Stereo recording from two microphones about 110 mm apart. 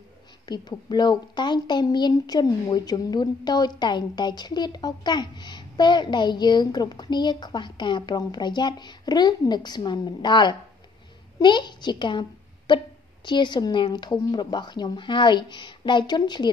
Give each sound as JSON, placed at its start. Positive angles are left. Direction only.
{"t": 0.5, "sound": "a woman's voice", "side_deg": 40}